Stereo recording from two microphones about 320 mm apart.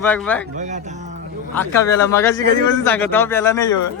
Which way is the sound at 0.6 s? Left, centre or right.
Right.